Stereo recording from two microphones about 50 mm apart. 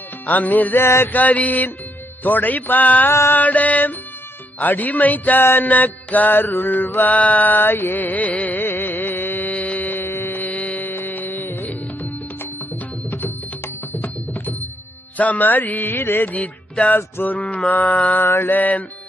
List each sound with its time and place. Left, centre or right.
0.3 s music: left
0.8 s mantra: left
1.1 s music: left
3.1 s mantra: left
3.3 s music: left
5.5 s mantra: left
11.7 s music: left
13.9 s music: left
17.2 s mantra: left
17.7 s music: left
18.3 s music: left